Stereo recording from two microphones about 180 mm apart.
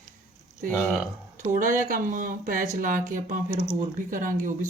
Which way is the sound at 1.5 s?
50° right (ahead or behind).